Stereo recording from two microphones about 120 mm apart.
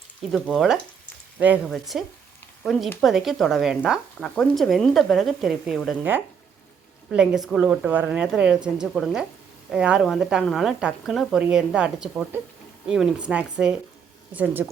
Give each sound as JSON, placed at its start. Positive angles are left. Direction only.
{"t": 0.3, "sound": "speech", "side_deg": 0}
{"t": 1.4, "sound": "speech", "side_deg": -15}
{"t": 1.6, "sound": "speech", "side_deg": 0}
{"t": 6.0, "sound": "speech", "side_deg": -15}
{"t": 7.1, "sound": "speech", "side_deg": -5}